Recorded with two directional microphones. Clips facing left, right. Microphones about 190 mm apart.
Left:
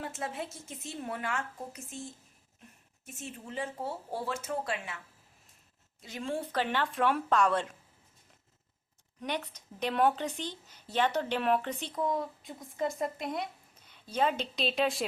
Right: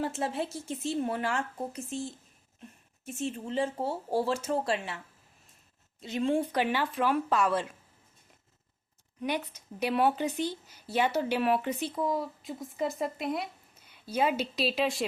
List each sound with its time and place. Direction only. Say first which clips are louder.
0.0 s a woman's voice: right 6 dB; 35° right (ahead or behind)
6.0 s speech: right 8 dB; 25° right (ahead or behind); by 7.8 s 5° right (ahead or behind)
9.2 s speech: right 3 dB; 10° right (ahead or behind)